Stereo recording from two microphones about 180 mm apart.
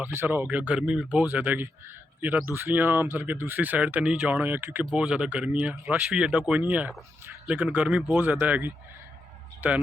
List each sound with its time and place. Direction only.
0.0 s speech: 10° right (ahead or behind)